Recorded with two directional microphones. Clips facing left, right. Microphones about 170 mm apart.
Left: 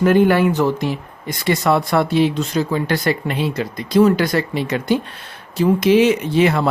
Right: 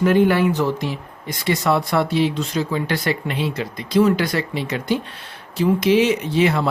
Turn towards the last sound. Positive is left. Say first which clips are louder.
# left 2 dB
turn(degrees=55)  # may be behind; listen again after turning